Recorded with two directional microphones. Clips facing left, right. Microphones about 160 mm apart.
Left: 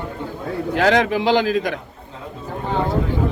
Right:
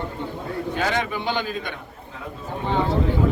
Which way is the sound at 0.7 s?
80° left.